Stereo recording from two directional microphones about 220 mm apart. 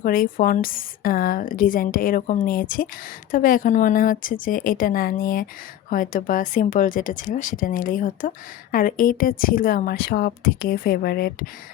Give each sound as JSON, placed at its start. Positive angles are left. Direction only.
{"t": 0.0, "sound": "a woman's voice", "side_deg": 40}